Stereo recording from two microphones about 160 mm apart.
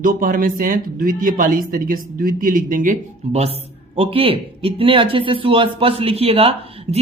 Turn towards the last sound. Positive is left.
turn(degrees=-40)  # may be behind; listen again after turning